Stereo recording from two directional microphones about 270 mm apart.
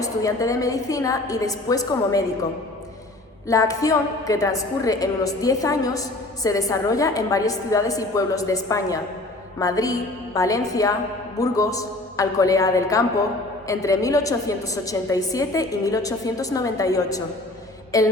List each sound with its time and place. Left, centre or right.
0.0 s a woman's voice: centre
3.4 s a woman's voice: centre